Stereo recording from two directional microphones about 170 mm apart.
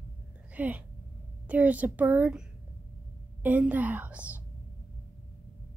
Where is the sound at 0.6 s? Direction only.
10° right (ahead or behind).